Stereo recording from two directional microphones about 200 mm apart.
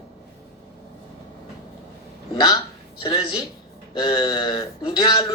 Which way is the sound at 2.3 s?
20° left (ahead or behind).